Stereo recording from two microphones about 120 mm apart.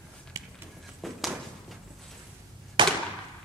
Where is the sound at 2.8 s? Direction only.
40° right (ahead or behind).